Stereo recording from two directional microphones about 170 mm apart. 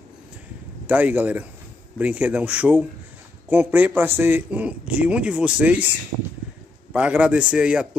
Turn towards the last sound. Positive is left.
turn(degrees=-5)  # may be behind; listen again after turning